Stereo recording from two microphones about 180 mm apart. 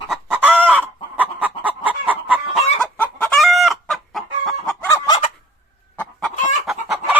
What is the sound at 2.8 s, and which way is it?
Chicken, 5° left (ahead or behind).